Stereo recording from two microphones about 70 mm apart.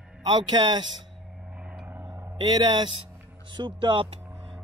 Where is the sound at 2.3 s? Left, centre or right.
Right.